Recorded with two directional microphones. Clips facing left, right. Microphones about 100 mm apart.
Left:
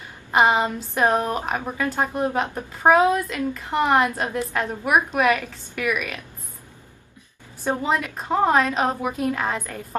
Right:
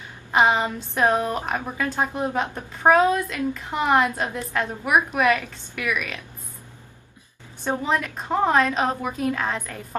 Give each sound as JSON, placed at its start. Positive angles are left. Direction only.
{"t": 0.3, "sound": "a woman's voice", "side_deg": 5}
{"t": 7.6, "sound": "a woman's voice", "side_deg": 5}